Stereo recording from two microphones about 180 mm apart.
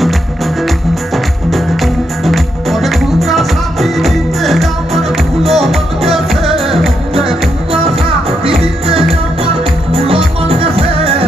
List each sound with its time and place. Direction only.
2.2 s music: centre (ahead or behind)
8.5 s music: 30° right (ahead or behind)